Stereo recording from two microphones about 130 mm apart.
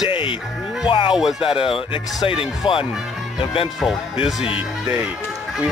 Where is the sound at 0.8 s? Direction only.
45° left (ahead or behind).